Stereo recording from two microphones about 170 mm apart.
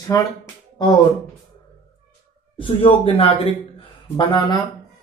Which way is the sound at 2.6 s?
30° left (ahead or behind).